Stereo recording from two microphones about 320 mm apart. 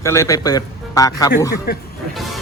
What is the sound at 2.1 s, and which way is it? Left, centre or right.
Speech, centre.